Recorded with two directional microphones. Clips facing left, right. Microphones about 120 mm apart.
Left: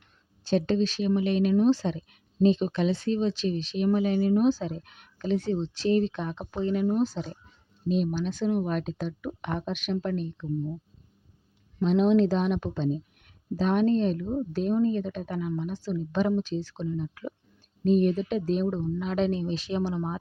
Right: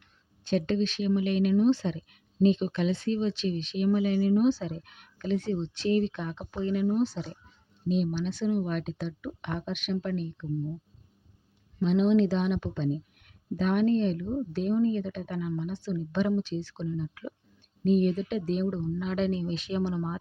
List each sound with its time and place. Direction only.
0.4 s speech: 30° left (ahead or behind)
11.8 s speech: 45° left (ahead or behind)